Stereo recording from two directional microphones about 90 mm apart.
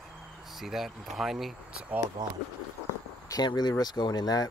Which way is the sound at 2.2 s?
50° right (ahead or behind).